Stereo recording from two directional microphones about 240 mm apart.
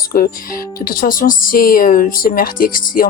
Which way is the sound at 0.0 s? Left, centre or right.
Left.